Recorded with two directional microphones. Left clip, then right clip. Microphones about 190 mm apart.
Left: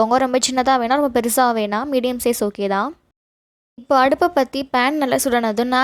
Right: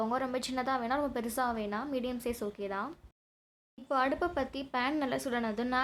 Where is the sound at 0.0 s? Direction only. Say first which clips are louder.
Left 17 dB; 45° left (ahead or behind).